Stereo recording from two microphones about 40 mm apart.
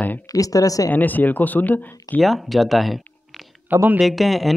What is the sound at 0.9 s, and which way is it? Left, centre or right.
Speech, left.